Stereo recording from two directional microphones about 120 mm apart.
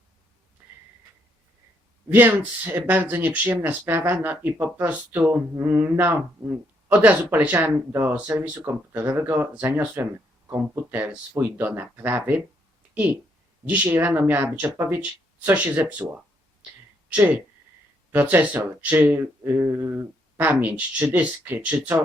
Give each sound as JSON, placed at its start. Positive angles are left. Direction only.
{"t": 2.0, "sound": "speech", "side_deg": -15}
{"t": 18.1, "sound": "speech", "side_deg": -15}